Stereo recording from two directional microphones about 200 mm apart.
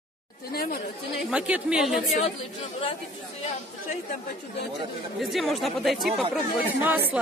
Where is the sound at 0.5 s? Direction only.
50° left (ahead or behind).